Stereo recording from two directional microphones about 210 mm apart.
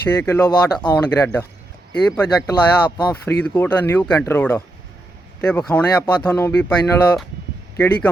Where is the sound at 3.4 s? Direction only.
5° left (ahead or behind).